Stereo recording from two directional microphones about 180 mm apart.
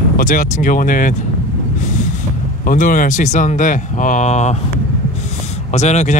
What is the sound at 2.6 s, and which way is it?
Speech, 50° left (ahead or behind).